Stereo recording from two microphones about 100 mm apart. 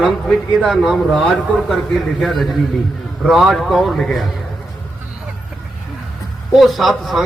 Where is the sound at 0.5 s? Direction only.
Centre (ahead or behind).